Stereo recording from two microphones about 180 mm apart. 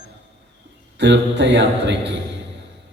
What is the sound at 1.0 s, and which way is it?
Speech, 80° right.